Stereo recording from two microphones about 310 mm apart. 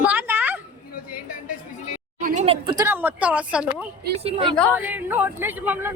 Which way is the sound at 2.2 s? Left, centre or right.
Right.